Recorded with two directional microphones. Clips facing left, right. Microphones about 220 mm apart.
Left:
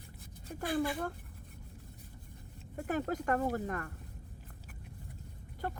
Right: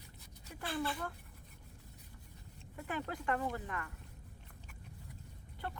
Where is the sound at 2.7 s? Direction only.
45° left (ahead or behind).